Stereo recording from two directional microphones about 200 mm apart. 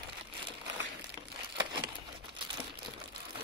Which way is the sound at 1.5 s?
25° right (ahead or behind).